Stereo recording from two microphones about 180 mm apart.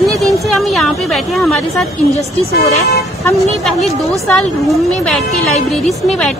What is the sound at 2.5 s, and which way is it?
Speech, 60° left (ahead or behind).